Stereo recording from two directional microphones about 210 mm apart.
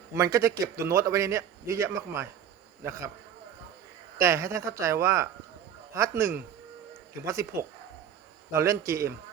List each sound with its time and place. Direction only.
0.1 s a man's voice: 15° right (ahead or behind)
4.2 s a man's voice: 15° right (ahead or behind)
8.5 s a man's voice: 15° right (ahead or behind)